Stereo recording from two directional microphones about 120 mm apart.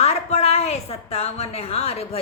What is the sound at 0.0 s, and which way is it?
A woman's voice, 60° left (ahead or behind).